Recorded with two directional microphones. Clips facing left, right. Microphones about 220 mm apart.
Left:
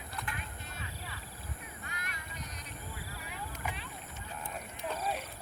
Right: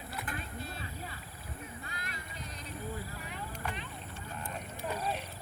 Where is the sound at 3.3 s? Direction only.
5° left (ahead or behind).